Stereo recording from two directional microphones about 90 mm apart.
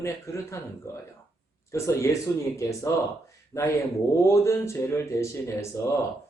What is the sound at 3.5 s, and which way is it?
Speech, 15° left (ahead or behind).